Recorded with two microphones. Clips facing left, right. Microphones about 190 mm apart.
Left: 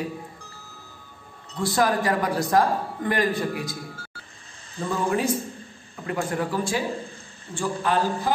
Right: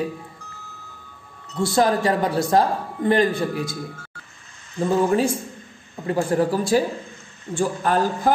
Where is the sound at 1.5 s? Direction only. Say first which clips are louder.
Right 3 dB; 25° right (ahead or behind).